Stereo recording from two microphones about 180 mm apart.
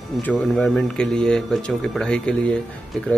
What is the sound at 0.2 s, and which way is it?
Speech, 5° left (ahead or behind).